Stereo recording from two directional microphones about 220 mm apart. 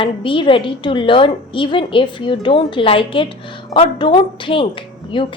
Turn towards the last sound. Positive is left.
turn(degrees=20)  # may be behind; listen again after turning